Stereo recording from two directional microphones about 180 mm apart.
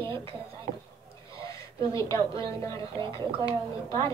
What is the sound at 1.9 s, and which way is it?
A woman's voice, 15° left (ahead or behind).